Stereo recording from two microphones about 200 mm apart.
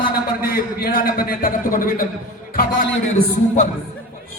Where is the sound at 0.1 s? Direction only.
50° left (ahead or behind).